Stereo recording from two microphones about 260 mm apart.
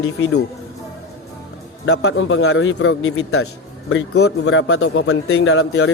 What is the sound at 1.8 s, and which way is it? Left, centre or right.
A man's voice, left.